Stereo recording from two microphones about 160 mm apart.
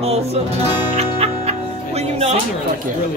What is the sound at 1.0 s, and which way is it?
Music, 40° right (ahead or behind).